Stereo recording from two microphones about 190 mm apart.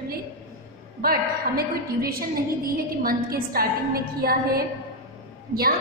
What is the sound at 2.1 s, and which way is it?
A woman's voice, 50° right (ahead or behind).